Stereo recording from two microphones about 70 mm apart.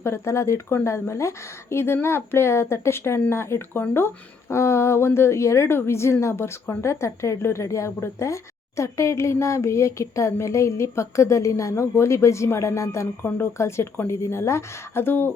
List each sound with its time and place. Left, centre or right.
0.0 s speech: left
13.2 s speech: left